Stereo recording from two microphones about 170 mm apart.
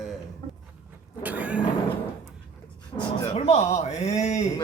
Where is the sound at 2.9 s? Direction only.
35° left (ahead or behind).